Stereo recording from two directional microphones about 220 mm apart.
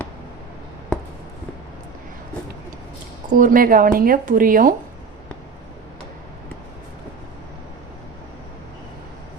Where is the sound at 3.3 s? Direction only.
35° right (ahead or behind).